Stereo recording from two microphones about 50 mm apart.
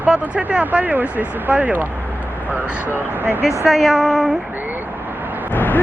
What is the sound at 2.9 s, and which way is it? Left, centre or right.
Speech, right.